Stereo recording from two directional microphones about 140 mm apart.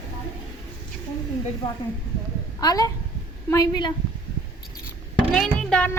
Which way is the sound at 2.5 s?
25° left (ahead or behind).